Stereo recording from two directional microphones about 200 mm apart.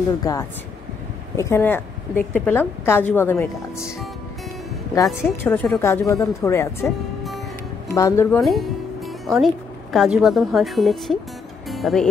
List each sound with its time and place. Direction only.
0.2 s a woman's voice: 15° left (ahead or behind)
5.0 s a woman's voice: 5° right (ahead or behind)
5.4 s a woman's voice: 10° left (ahead or behind)
7.9 s a woman's voice: 15° left (ahead or behind)
8.5 s music: centre (ahead or behind)
9.9 s a woman's voice: centre (ahead or behind)